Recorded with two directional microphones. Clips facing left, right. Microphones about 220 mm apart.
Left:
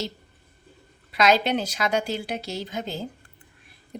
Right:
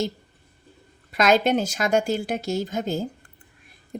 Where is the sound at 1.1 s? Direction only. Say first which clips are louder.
Right 2 dB; 45° right (ahead or behind).